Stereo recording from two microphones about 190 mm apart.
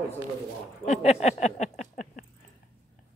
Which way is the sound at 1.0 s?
35° left (ahead or behind).